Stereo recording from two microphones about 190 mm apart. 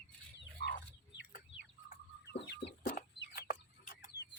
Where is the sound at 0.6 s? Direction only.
60° left (ahead or behind).